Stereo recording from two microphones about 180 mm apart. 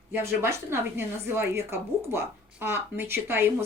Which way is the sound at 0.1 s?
15° right (ahead or behind).